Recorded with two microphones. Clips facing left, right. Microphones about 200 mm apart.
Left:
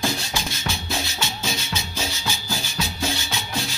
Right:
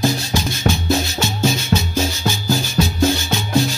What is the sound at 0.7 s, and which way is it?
Music, 45° right (ahead or behind).